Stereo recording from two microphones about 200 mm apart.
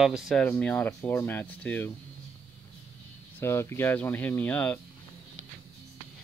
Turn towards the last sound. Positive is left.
turn(degrees=10)  # may be behind; listen again after turning